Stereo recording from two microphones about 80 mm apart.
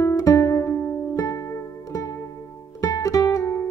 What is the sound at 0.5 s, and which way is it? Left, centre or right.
Music, left.